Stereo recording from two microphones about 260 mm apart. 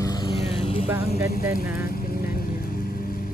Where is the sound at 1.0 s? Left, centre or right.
Left.